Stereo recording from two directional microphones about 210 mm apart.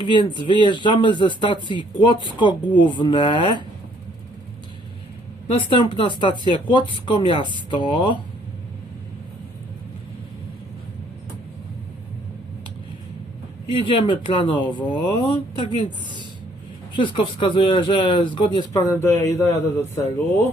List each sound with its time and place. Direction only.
0.0 s speech: 20° left (ahead or behind)
5.5 s speech: 25° left (ahead or behind)
13.7 s speech: 25° left (ahead or behind)
16.9 s speech: 25° left (ahead or behind)